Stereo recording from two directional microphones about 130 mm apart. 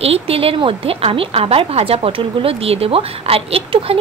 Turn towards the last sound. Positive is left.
turn(degrees=-45)  # may be behind; listen again after turning